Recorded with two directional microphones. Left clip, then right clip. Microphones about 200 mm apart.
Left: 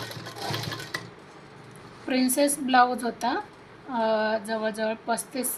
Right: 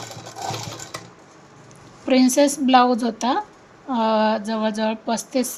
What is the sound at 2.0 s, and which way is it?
Speech, 50° right (ahead or behind).